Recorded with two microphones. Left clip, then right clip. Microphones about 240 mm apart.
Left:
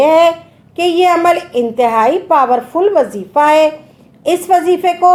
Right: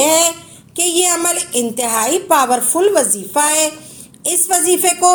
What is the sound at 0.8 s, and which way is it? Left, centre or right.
A woman's voice, right.